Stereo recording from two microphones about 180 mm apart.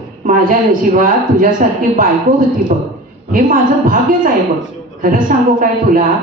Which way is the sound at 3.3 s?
50° right (ahead or behind).